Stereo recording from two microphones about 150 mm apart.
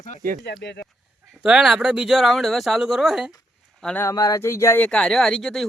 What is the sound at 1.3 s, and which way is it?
Speech, 5° right (ahead or behind).